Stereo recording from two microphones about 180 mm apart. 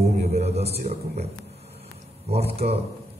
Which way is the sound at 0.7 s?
60° right (ahead or behind).